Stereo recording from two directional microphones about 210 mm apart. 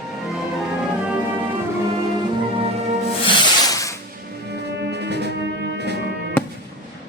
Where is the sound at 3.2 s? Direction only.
20° left (ahead or behind).